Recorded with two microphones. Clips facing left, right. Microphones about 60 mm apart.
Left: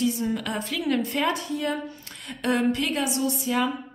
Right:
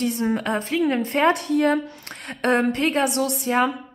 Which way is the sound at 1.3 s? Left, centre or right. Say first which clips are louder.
Right 8 dB; right.